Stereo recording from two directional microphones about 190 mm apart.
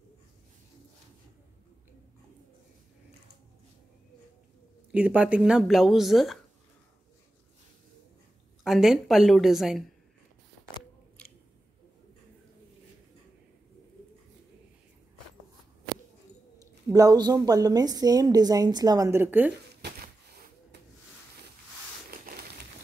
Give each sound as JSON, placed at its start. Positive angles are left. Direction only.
{"t": 4.9, "sound": "speech", "side_deg": -5}
{"t": 8.6, "sound": "speech", "side_deg": 0}
{"t": 16.5, "sound": "speech", "side_deg": -20}